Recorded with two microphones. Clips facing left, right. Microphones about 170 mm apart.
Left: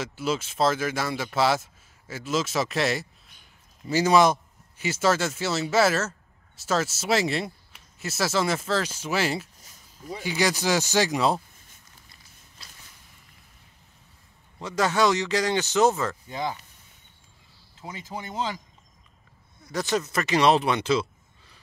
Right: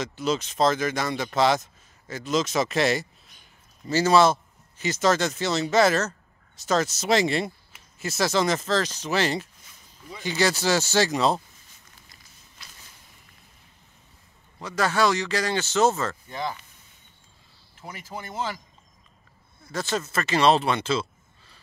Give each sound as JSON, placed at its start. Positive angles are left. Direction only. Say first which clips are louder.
{"t": 0.0, "sound": "speech", "louder": "right 2 dB", "side_deg": 5}
{"t": 3.8, "sound": "speech", "louder": "right 1 dB", "side_deg": 10}
{"t": 9.6, "sound": "a sound", "louder": "left 3 dB", "side_deg": 40}
{"t": 10.2, "sound": "speech", "louder": "right 1 dB", "side_deg": 15}
{"t": 14.6, "sound": "speech", "louder": "even", "side_deg": 20}
{"t": 17.7, "sound": "speech", "louder": "left 1 dB", "side_deg": 20}
{"t": 19.6, "sound": "speech", "louder": "left 2 dB", "side_deg": 15}